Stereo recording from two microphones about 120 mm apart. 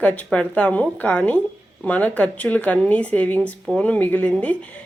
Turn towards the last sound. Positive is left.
turn(degrees=10)  # may be behind; listen again after turning